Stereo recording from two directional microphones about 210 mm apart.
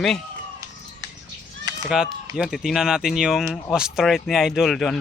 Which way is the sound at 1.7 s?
20° right (ahead or behind).